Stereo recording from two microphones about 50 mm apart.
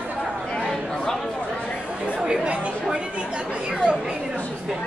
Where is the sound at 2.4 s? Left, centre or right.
Right.